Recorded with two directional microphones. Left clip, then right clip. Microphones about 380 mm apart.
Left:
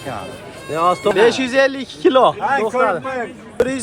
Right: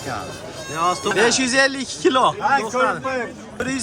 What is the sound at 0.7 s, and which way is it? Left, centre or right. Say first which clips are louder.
Speech: left 5 dB; centre.